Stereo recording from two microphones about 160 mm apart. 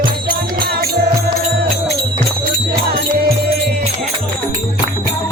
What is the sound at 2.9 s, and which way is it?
Music, 75° right (ahead or behind).